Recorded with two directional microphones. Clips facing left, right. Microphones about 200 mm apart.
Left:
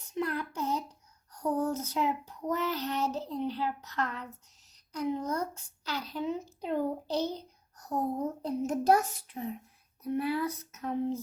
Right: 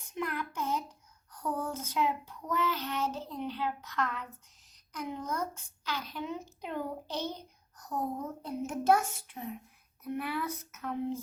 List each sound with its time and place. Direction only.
0.1 s a sound: 35° left (ahead or behind)
1.5 s child singing: 40° left (ahead or behind)
3.2 s a child's voice: 35° left (ahead or behind)